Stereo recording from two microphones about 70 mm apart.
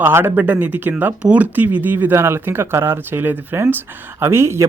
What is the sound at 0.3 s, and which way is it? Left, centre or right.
Speech, right.